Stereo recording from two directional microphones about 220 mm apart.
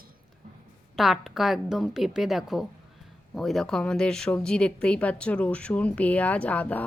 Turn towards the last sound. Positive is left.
turn(degrees=5)  # may be behind; listen again after turning